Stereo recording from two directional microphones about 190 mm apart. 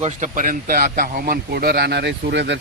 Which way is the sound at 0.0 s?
40° right (ahead or behind).